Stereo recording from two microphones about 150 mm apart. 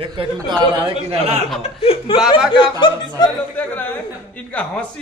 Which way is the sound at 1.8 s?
40° left (ahead or behind).